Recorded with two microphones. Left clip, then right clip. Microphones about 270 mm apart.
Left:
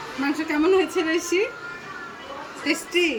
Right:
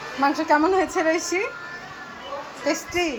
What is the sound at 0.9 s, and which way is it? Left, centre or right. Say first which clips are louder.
Speech: right 2 dB; centre.